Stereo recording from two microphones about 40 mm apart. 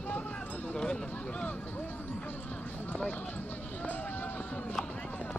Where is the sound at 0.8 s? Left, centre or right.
Centre.